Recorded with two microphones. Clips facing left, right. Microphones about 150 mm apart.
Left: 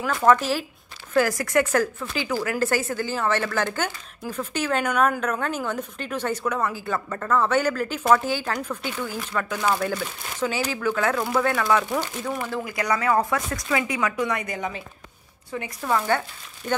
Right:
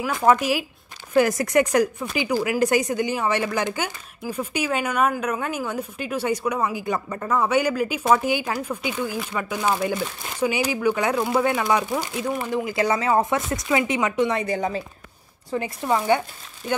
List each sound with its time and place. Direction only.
0.1 s speech: 10° right (ahead or behind); by 15.9 s 30° right (ahead or behind)